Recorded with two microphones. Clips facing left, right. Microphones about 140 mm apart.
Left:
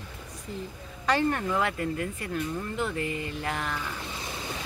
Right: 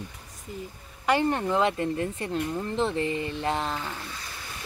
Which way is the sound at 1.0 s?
15° right (ahead or behind).